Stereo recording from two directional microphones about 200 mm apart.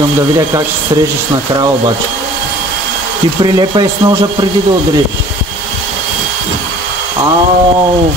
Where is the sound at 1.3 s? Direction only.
20° right (ahead or behind).